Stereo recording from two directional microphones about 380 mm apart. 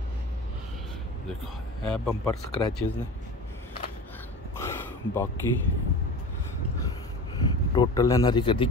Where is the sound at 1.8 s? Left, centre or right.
Centre.